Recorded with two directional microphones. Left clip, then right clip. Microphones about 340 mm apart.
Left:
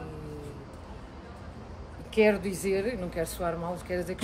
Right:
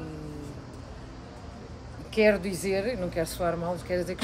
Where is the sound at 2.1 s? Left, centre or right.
Centre.